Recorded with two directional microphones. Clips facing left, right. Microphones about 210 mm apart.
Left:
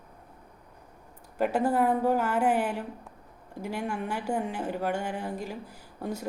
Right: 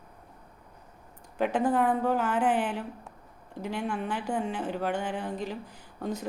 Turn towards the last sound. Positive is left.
turn(degrees=10)  # may be behind; listen again after turning